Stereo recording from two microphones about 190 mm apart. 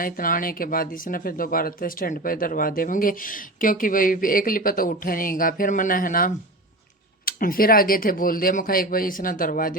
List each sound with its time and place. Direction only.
0.0 s speech: 50° left (ahead or behind)